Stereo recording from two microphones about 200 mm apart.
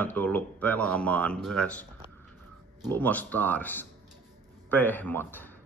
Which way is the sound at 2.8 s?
10° left (ahead or behind).